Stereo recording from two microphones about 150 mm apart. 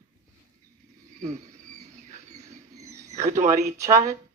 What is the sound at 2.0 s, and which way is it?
Rodents, 50° right (ahead or behind).